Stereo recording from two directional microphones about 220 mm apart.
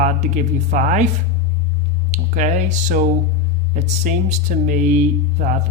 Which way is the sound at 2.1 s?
35° right (ahead or behind).